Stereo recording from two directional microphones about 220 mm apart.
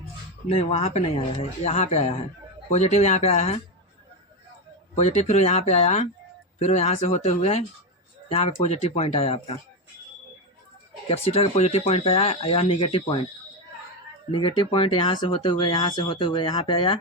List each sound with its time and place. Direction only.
0.4 s speech: 30° left (ahead or behind)
4.9 s speech: 30° left (ahead or behind)
11.1 s speech: 25° left (ahead or behind)
14.3 s speech: 25° left (ahead or behind)